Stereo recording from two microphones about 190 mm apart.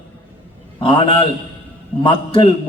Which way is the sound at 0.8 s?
30° left (ahead or behind).